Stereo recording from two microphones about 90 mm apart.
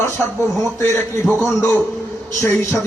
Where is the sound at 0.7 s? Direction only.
30° left (ahead or behind).